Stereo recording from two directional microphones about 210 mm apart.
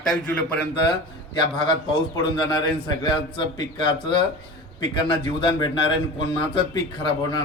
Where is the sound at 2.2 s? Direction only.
20° left (ahead or behind).